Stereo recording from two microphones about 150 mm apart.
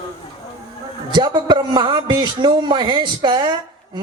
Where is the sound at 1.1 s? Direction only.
30° right (ahead or behind).